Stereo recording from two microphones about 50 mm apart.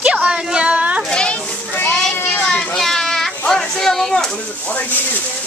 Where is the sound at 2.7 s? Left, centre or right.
Centre.